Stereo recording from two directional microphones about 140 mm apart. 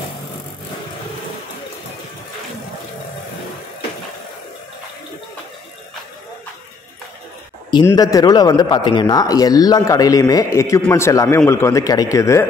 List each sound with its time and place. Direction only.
7.8 s a man's voice: 25° left (ahead or behind)